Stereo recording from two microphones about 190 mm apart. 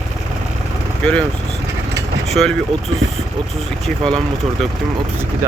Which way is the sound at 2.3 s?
Centre (ahead or behind).